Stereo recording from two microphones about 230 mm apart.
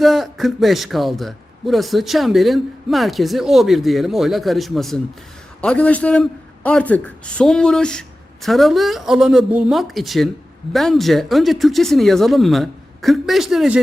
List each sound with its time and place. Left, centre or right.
0.0 s a man's voice: centre